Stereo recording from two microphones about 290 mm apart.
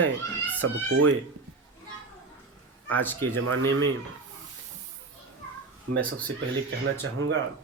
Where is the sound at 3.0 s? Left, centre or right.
Centre.